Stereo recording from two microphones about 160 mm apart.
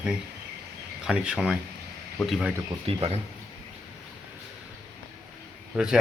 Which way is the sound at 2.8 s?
35° right (ahead or behind).